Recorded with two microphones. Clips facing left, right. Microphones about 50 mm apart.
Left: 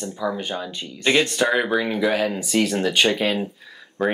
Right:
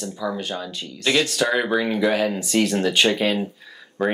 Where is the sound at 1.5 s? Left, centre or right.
Centre.